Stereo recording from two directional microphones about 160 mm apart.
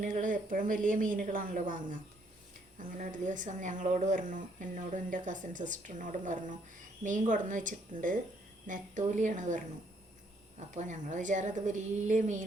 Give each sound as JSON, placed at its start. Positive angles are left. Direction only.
{"t": 0.0, "sound": "a woman's voice", "side_deg": -55}
{"t": 10.8, "sound": "speech", "side_deg": -50}